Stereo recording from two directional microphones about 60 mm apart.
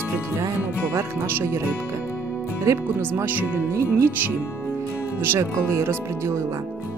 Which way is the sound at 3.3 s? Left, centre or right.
Right.